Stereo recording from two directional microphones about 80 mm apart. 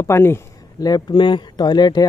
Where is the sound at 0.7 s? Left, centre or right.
Left.